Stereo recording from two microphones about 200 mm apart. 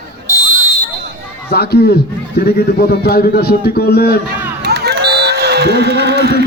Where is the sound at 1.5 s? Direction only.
55° left (ahead or behind).